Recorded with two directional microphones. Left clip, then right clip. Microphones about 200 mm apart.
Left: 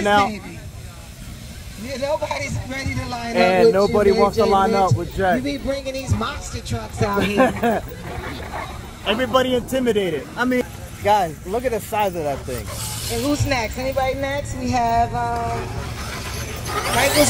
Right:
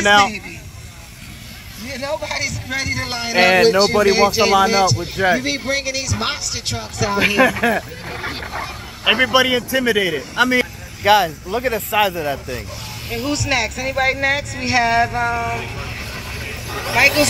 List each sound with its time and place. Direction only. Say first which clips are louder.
0.0 s speech: right 4 dB; 5° right (ahead or behind)
1.9 s speech: left 1 dB; 45° left (ahead or behind)
3.3 s speech: right 2 dB; 10° right (ahead or behind)
5.4 s speech: right 4 dB; 35° left (ahead or behind)
7.2 s speech: right 4 dB; centre (ahead or behind)
8.2 s speech: right 5 dB; 15° left (ahead or behind)
9.0 s speech: right 4 dB; centre (ahead or behind)
13.1 s speech: right 2 dB; 20° right (ahead or behind)
14.0 s speech: right 5 dB; 5° left (ahead or behind)
14.6 s speech: right 3 dB; 15° left (ahead or behind)
15.0 s speech: right 2 dB; 15° right (ahead or behind)
16.8 s speech: right 4 dB; 10° left (ahead or behind)